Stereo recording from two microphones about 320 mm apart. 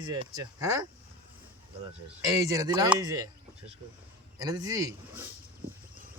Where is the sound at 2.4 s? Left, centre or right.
Centre.